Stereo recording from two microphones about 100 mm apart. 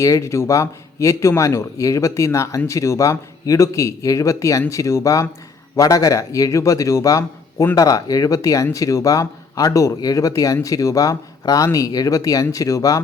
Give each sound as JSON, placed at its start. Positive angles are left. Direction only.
{"t": 0.0, "sound": "speech", "side_deg": 30}